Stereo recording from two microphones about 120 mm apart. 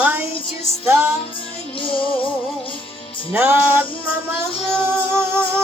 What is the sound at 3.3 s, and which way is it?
Music, 20° right (ahead or behind).